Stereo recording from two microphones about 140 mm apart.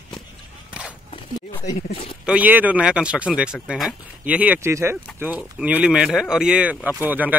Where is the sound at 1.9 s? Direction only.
45° left (ahead or behind).